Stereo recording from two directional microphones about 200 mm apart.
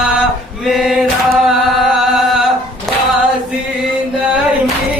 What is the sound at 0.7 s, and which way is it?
Choir, centre (ahead or behind).